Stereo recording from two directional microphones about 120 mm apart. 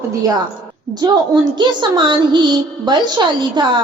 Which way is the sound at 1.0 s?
30° right (ahead or behind).